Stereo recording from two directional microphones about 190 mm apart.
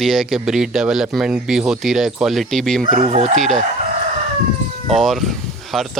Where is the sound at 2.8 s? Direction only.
45° right (ahead or behind).